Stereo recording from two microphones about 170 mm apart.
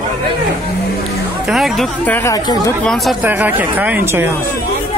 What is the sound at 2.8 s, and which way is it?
Speech, centre (ahead or behind).